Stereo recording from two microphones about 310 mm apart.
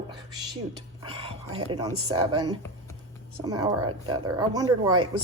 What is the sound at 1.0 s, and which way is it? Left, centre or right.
Speech, centre.